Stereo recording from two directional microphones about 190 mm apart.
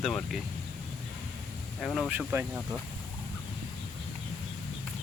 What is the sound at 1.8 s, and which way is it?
Speech, centre (ahead or behind).